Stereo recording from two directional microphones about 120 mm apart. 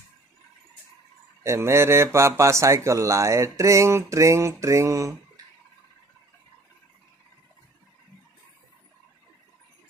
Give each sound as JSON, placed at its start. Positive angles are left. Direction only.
{"t": 1.4, "sound": "speech", "side_deg": -20}